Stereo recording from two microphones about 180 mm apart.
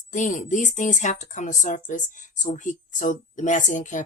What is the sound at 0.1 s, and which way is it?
Speech, 45° left (ahead or behind).